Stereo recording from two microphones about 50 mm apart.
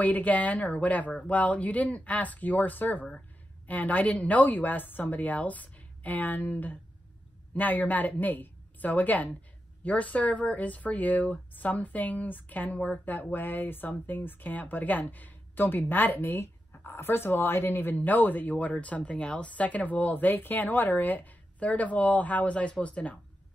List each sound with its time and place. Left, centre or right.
0.0 s speech: left